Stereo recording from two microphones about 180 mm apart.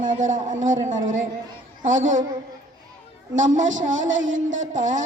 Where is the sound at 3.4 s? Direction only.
90° right.